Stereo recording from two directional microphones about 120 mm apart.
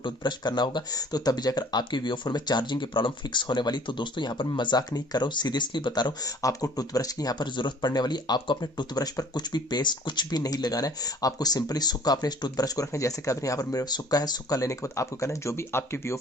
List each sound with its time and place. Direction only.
0.0 s speech: 40° left (ahead or behind); by 16.1 s 20° left (ahead or behind)